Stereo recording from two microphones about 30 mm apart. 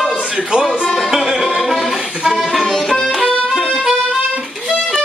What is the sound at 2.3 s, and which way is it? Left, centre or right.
Music, centre.